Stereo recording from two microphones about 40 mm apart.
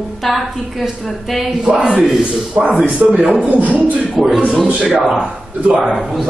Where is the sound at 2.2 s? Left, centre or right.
Right.